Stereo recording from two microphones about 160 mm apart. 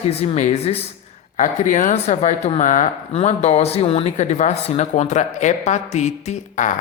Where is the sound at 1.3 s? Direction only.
55° left (ahead or behind).